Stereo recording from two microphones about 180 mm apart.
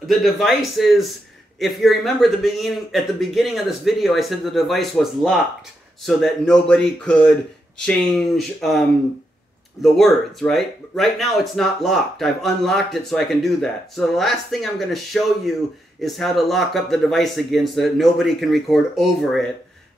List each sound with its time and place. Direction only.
0.0 s speech: centre (ahead or behind)